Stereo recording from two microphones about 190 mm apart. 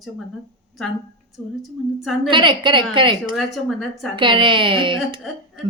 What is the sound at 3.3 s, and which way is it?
Speech, centre (ahead or behind).